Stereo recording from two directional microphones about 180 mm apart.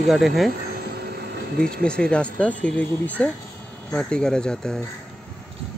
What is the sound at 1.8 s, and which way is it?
Speech, 5° left (ahead or behind).